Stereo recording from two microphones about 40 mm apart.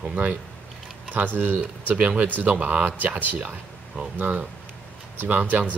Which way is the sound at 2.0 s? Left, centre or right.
Right.